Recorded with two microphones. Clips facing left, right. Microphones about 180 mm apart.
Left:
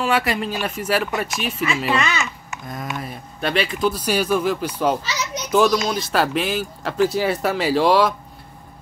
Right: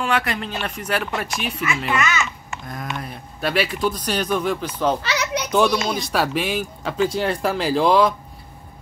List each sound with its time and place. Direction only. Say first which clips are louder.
0.0 s speech: left 2 dB; 5° left (ahead or behind)
1.9 s a child's voice: even; 30° left (ahead or behind)
2.7 s speech: left 2 dB; centre (ahead or behind)
3.9 s speech: left 3 dB; 10° left (ahead or behind)
5.0 s children playing: right 4 dB; 60° right (ahead or behind)
5.5 s speech: left 2 dB; centre (ahead or behind)